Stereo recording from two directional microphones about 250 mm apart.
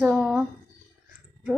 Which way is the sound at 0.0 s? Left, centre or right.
Centre.